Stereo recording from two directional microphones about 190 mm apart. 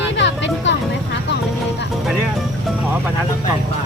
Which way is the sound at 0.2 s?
70° left (ahead or behind).